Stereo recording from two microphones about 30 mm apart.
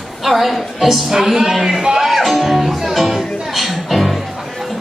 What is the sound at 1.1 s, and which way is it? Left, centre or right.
Music, centre.